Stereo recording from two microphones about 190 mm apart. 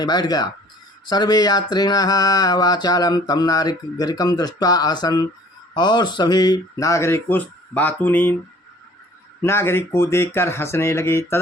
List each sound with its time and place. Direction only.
0.0 s a sound: 20° left (ahead or behind)
5.7 s speech: 25° left (ahead or behind)
9.4 s speech: 15° left (ahead or behind)